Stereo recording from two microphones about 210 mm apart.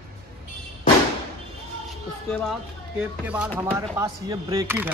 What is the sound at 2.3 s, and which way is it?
Speech, centre (ahead or behind).